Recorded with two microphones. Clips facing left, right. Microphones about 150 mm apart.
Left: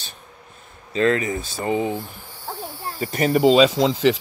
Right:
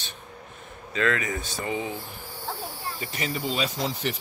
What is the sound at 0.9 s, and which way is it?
Speech, 30° left (ahead or behind).